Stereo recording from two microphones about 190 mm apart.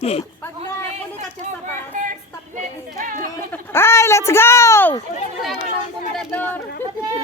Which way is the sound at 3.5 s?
10° left (ahead or behind).